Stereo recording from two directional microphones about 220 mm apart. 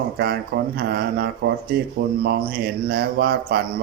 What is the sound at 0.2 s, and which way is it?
Speech, 45° right (ahead or behind).